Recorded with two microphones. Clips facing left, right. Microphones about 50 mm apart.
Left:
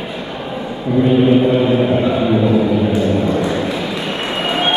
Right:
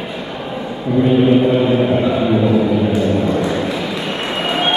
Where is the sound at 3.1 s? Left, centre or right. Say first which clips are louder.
Even; centre.